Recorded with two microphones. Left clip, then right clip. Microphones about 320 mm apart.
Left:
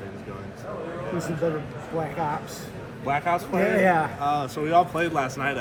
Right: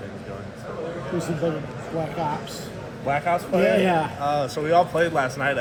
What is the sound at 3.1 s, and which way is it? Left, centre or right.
A man's voice, centre.